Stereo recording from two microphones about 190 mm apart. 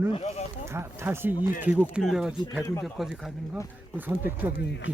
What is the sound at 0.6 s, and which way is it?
Speech, 15° right (ahead or behind).